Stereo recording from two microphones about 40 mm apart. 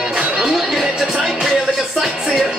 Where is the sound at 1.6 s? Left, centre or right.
Centre.